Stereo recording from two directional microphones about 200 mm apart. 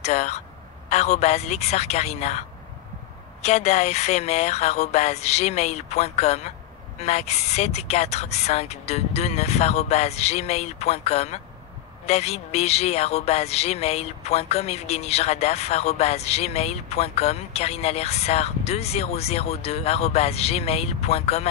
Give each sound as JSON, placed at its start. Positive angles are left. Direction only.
{"t": 0.0, "sound": "speech", "side_deg": 35}
{"t": 3.4, "sound": "speech", "side_deg": 35}